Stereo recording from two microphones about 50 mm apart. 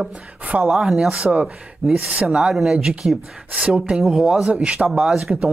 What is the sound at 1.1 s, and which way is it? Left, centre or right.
Speech, right.